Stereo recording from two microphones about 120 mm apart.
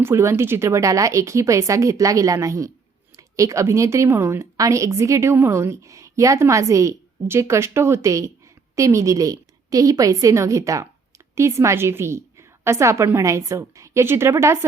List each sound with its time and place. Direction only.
0.0 s a woman's voice: 20° right (ahead or behind)